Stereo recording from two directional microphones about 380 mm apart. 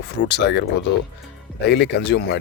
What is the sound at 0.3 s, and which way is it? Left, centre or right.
Speech, left.